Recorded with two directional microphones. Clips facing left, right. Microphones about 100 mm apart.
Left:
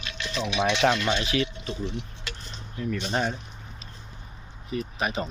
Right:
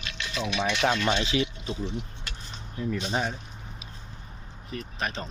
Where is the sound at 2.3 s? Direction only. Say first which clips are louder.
Left 3 dB; 90° left.